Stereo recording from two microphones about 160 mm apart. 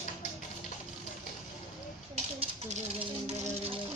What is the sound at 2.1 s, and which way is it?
Music, 45° right (ahead or behind).